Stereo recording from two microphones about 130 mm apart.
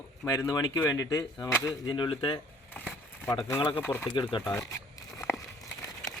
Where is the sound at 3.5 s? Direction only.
45° left (ahead or behind).